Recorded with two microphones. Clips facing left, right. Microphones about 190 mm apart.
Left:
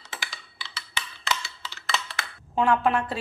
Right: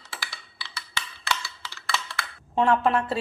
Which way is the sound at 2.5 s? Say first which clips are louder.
Right 1 dB; centre (ahead or behind).